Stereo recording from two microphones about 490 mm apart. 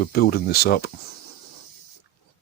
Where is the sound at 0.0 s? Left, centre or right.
Centre.